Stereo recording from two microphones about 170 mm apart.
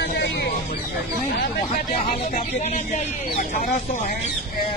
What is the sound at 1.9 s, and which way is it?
Speech, 50° left (ahead or behind).